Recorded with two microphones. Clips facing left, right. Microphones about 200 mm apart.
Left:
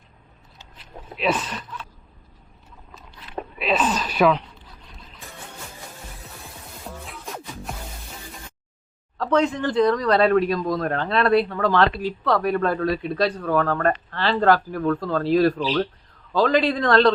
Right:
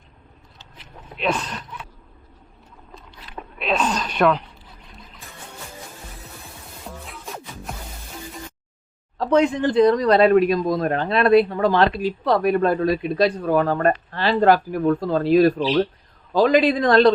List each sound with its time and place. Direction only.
1.1 s speech: centre (ahead or behind)
3.6 s a sound: 5° left (ahead or behind)
6.8 s music: centre (ahead or behind)
9.1 s speech: 15° right (ahead or behind)